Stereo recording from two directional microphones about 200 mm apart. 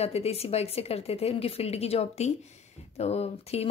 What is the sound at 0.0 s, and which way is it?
A woman's voice, 30° left (ahead or behind).